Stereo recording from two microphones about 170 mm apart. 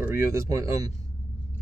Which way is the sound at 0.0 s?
15° right (ahead or behind).